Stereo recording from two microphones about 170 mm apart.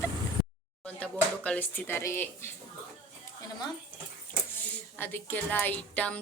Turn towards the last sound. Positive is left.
turn(degrees=10)  # may be behind; listen again after turning